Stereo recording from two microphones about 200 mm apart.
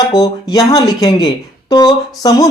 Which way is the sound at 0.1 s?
20° left (ahead or behind).